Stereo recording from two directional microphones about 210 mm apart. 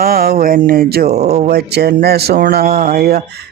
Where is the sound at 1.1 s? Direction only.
30° right (ahead or behind).